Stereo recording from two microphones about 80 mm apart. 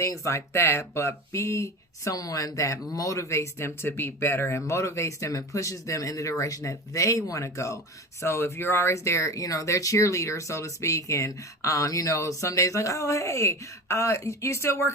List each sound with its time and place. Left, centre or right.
0.0 s speech: left